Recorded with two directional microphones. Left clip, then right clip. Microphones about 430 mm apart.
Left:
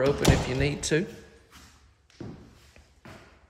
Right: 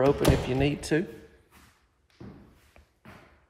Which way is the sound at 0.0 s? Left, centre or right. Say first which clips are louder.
Right 1 dB; centre.